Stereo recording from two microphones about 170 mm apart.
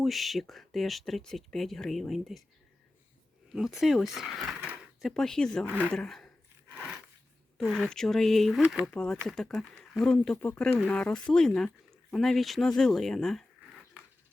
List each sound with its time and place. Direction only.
0.0 s speech: centre (ahead or behind)
3.5 s speech: centre (ahead or behind)
5.6 s a woman's voice: 10° right (ahead or behind)
5.9 s speech: 5° left (ahead or behind)
7.6 s speech: centre (ahead or behind)